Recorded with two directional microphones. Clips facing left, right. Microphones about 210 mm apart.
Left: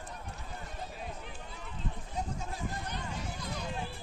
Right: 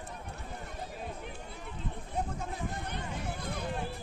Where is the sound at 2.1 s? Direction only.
55° right (ahead or behind).